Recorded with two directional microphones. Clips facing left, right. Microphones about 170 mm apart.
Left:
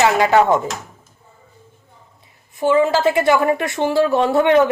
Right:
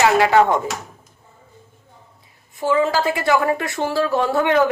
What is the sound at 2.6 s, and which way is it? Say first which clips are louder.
A woman's voice: left 3 dB; 20° left (ahead or behind).